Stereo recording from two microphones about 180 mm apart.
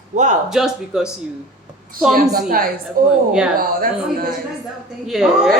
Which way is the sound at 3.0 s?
50° right (ahead or behind).